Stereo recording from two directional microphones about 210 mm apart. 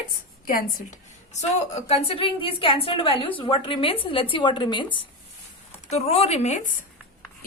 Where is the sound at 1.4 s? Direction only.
30° left (ahead or behind).